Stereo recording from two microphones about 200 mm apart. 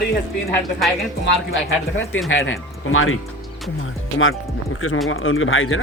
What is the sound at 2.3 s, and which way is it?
Speech, 80° left.